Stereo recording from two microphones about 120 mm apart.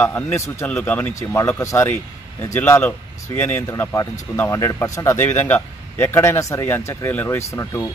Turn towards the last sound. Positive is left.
turn(degrees=25)  # may be behind; listen again after turning